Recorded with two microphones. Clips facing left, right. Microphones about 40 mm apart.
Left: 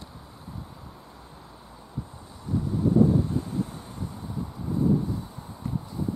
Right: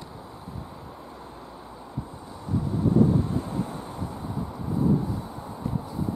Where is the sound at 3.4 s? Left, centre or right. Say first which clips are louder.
Right 1 dB; centre.